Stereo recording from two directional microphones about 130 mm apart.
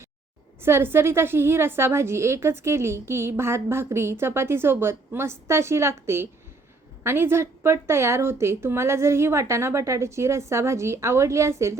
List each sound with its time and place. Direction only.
0.6 s a woman's voice: 20° right (ahead or behind)